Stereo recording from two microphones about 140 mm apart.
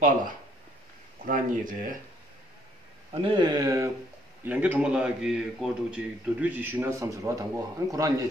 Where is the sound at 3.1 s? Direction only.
35° right (ahead or behind).